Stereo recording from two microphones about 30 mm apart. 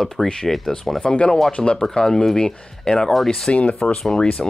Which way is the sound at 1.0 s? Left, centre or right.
Left.